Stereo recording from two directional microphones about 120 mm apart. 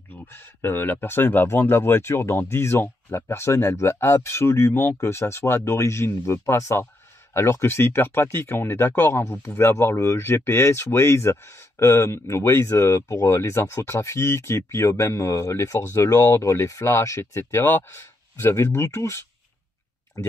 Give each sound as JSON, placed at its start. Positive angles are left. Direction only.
{"t": 0.1, "sound": "speech", "side_deg": 20}
{"t": 20.2, "sound": "speech", "side_deg": 25}